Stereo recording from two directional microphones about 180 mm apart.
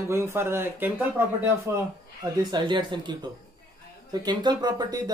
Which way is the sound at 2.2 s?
25° right (ahead or behind).